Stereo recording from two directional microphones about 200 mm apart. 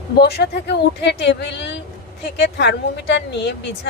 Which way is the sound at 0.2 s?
55° left (ahead or behind).